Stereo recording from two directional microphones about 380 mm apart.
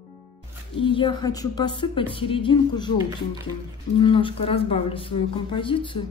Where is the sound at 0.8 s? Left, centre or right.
Centre.